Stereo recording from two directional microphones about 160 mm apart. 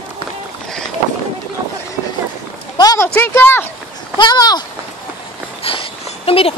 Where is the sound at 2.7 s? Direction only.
20° left (ahead or behind).